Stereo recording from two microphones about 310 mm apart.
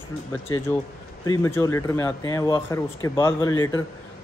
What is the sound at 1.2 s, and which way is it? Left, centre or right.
Speech, centre.